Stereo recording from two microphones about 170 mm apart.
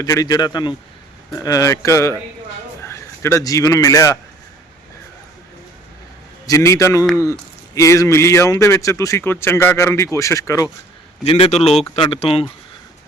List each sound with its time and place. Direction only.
0.0 s a man's voice: 20° left (ahead or behind)
6.4 s a man's voice: 20° left (ahead or behind)
11.2 s a man's voice: 35° left (ahead or behind)